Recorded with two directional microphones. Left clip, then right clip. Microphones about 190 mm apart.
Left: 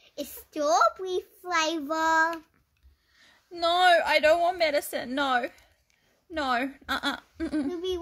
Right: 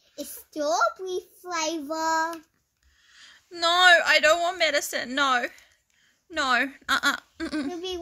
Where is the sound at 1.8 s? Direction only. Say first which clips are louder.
Left 1 dB; 35° right (ahead or behind).